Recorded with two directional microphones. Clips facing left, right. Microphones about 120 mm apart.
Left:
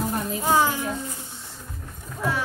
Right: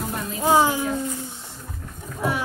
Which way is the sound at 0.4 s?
20° right (ahead or behind).